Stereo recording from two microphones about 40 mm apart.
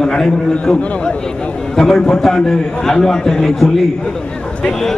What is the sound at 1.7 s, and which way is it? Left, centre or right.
A man's voice, centre.